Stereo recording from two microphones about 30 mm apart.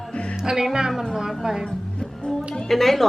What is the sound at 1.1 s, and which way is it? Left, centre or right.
Speech, centre.